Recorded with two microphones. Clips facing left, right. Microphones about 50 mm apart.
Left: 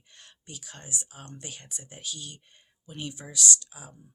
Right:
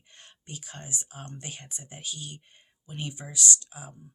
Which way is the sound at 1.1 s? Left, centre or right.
Right.